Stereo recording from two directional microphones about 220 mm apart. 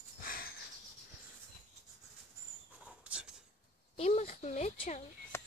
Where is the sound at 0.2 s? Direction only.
40° left (ahead or behind).